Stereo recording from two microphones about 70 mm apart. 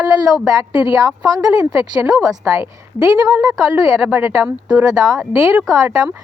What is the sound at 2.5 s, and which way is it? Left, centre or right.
Speech, right.